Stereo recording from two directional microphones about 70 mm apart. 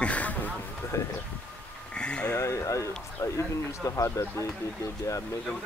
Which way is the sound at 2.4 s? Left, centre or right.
Left.